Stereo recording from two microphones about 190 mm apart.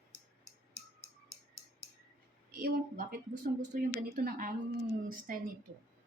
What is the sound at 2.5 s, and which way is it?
A woman's voice, 50° right (ahead or behind).